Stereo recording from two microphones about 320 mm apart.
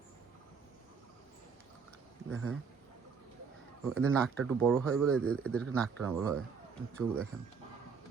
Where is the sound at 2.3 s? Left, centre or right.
Right.